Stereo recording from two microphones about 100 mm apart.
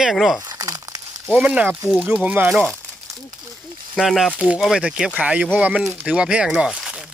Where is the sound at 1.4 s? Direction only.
15° right (ahead or behind).